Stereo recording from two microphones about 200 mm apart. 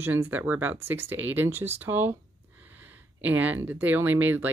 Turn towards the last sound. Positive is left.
turn(degrees=-10)  # may be behind; listen again after turning